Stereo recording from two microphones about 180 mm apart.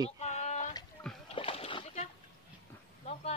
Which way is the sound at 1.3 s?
30° left (ahead or behind).